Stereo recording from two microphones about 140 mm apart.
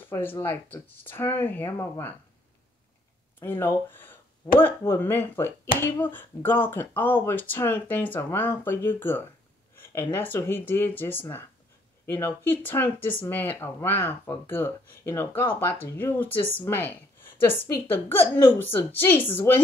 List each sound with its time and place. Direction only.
0.1 s speech: 15° left (ahead or behind)
3.3 s speech: 15° left (ahead or behind)